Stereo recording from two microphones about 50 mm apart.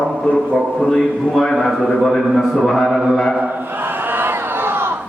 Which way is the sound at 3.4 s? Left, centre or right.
Right.